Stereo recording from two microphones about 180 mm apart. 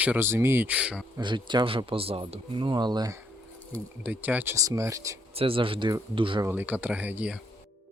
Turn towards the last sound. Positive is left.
turn(degrees=-10)  # may be behind; listen again after turning